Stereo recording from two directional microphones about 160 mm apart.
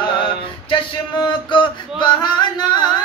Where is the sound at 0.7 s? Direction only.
30° left (ahead or behind).